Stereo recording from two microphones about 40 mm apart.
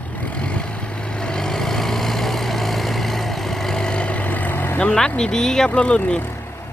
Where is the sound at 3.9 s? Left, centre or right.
Left.